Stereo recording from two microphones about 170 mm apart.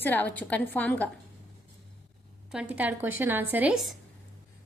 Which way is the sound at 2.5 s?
5° right (ahead or behind).